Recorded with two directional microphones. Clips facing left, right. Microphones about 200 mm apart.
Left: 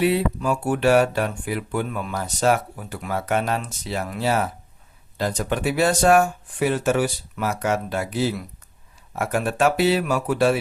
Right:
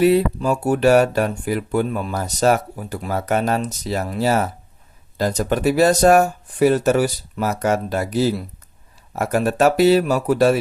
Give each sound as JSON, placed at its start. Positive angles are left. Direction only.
{"t": 0.0, "sound": "speech", "side_deg": -40}